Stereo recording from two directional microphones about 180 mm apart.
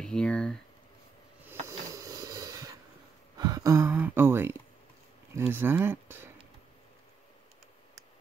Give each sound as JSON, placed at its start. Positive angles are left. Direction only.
{"t": 0.0, "sound": "speech", "side_deg": 5}
{"t": 1.9, "sound": "a sound", "side_deg": -20}
{"t": 5.3, "sound": "speech", "side_deg": -10}